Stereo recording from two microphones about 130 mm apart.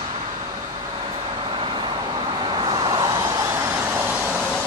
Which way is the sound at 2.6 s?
35° right (ahead or behind).